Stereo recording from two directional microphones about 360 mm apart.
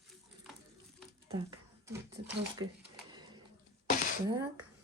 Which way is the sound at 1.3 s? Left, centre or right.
Centre.